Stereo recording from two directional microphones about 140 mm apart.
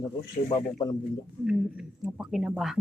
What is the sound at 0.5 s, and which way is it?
Speech, 25° left (ahead or behind).